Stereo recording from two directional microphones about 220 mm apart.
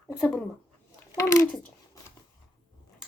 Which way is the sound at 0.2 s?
5° left (ahead or behind).